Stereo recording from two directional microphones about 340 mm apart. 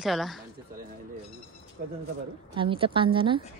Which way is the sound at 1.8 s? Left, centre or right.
Right.